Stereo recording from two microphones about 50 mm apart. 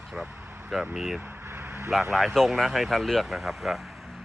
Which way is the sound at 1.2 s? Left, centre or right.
Right.